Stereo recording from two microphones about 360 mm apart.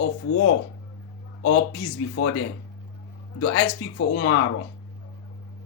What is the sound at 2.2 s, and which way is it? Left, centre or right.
Speech, left.